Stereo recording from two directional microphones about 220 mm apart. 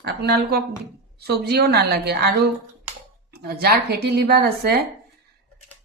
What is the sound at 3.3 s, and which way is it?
Speech, 45° right (ahead or behind).